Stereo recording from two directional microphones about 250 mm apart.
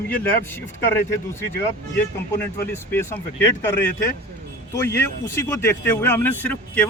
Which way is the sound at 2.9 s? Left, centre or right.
Centre.